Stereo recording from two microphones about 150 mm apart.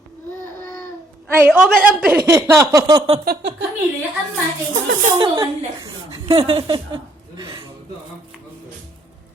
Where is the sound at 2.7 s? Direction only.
30° right (ahead or behind).